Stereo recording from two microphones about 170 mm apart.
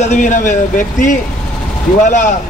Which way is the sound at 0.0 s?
45° left (ahead or behind).